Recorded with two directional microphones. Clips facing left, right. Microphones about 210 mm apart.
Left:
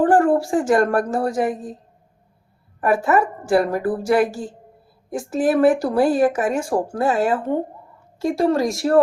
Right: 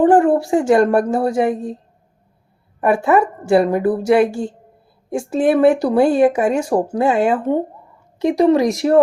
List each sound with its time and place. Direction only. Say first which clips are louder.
0.0 s a woman's voice: right 3 dB; 25° right (ahead or behind)
2.9 s a woman's voice: right 3 dB; 25° right (ahead or behind)